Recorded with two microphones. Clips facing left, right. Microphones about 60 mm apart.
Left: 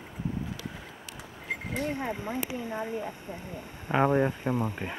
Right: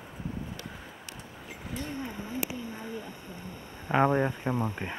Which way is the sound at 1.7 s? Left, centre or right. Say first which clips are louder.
Left 4 dB; left.